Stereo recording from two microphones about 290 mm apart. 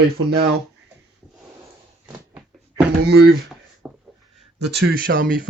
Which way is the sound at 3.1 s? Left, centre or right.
Right.